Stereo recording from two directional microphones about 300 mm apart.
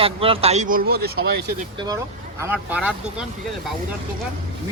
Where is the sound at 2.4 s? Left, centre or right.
Centre.